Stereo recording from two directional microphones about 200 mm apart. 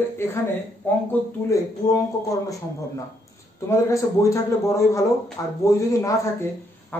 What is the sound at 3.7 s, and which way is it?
A woman's voice, 15° left (ahead or behind).